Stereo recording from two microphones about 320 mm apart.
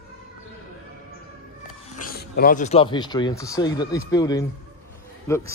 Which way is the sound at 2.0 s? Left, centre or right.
Left.